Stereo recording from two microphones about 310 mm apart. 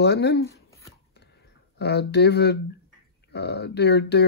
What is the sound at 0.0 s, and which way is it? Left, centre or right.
Speech, left.